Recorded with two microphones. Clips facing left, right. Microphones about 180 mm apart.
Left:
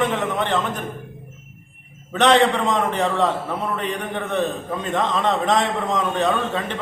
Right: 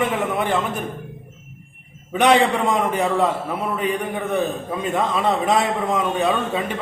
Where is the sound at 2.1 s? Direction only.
10° right (ahead or behind).